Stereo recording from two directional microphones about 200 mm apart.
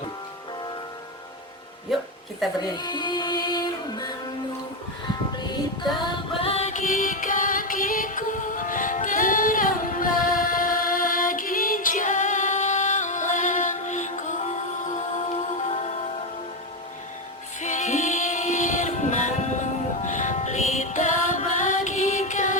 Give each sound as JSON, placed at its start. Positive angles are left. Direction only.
{"t": 1.9, "sound": "a sound", "side_deg": 0}
{"t": 2.6, "sound": "music", "side_deg": 20}
{"t": 5.4, "sound": "music", "side_deg": 20}
{"t": 17.6, "sound": "music", "side_deg": 40}